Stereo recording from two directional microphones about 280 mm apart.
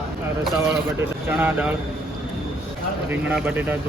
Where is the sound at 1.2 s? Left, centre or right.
Centre.